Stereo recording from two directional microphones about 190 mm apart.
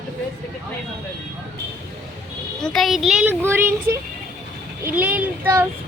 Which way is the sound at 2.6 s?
Centre (ahead or behind).